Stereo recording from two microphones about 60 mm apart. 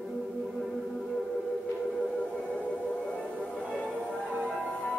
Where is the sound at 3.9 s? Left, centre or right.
Centre.